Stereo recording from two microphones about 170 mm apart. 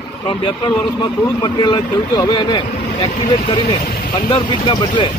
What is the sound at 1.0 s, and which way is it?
Speech, 25° left (ahead or behind).